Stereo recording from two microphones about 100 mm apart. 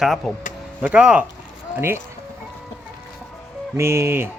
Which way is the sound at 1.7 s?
25° right (ahead or behind).